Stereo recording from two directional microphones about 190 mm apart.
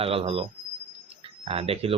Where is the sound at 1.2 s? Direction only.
30° right (ahead or behind).